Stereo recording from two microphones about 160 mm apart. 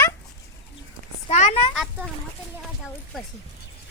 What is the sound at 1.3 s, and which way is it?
Speech, 45° left (ahead or behind).